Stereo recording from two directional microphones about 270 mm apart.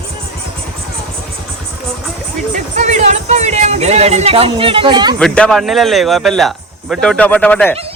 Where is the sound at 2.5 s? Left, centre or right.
Right.